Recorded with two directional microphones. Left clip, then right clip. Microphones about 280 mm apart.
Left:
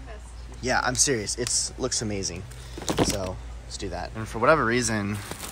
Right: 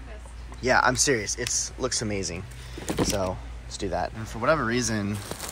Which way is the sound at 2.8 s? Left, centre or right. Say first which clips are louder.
Left 3 dB; left.